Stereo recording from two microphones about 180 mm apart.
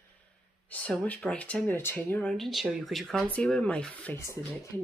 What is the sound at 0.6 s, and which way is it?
Speech, 5° left (ahead or behind).